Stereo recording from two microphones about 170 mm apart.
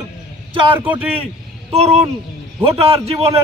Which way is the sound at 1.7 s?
35° right (ahead or behind).